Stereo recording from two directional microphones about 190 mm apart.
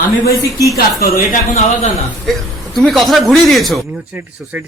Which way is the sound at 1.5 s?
35° left (ahead or behind).